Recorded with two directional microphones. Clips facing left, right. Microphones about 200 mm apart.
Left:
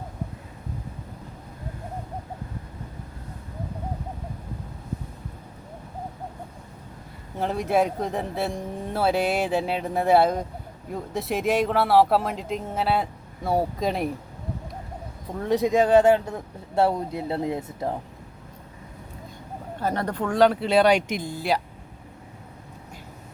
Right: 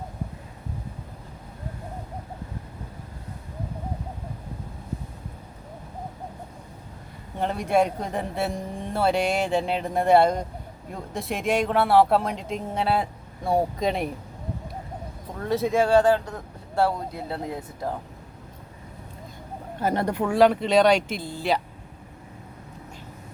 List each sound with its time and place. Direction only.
7.3 s speech: centre (ahead or behind)
15.4 s speech: 15° left (ahead or behind)
19.8 s speech: 10° right (ahead or behind); by 21.6 s 10° left (ahead or behind)